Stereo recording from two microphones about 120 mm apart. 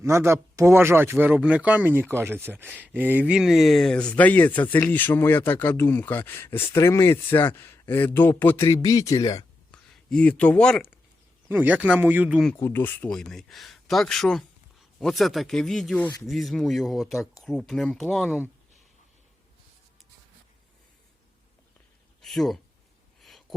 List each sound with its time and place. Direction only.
0.0 s speech: 25° right (ahead or behind); by 9.5 s 30° left (ahead or behind)
9.7 s speech: 5° left (ahead or behind)
11.4 s speech: 15° right (ahead or behind)
12.5 s speech: 20° left (ahead or behind)
13.1 s speech: 5° left (ahead or behind)
22.2 s speech: centre (ahead or behind)
23.2 s a sound: centre (ahead or behind)